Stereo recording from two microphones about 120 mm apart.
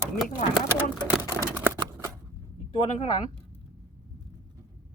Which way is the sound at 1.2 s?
20° right (ahead or behind).